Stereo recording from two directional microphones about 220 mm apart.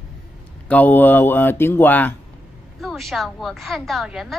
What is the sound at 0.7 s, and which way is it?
A woman's voice, 10° left (ahead or behind).